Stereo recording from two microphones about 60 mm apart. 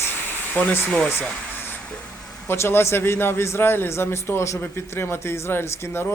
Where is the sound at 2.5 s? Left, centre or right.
Left.